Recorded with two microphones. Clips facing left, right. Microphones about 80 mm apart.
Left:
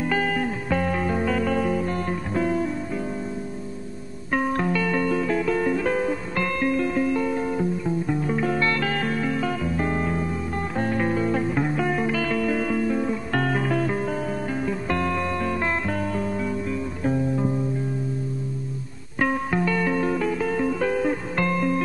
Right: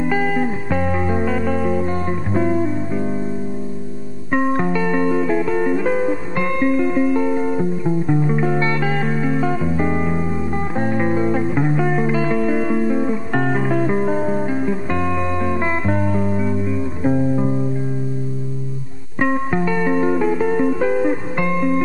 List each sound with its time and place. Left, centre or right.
0.0 s music: centre
4.3 s music: centre
19.1 s music: centre